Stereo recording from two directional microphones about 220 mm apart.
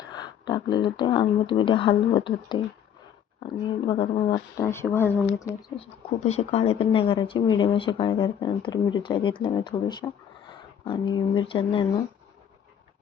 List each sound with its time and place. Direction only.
0.1 s speech: 20° left (ahead or behind)
5.7 s speech: 30° left (ahead or behind)